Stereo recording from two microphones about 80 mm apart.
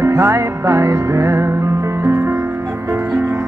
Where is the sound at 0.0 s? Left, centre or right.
Right.